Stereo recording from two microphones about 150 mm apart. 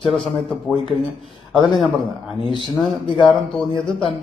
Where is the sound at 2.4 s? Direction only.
35° left (ahead or behind).